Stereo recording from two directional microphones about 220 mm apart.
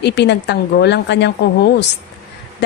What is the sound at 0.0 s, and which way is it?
A woman's voice, 50° left (ahead or behind).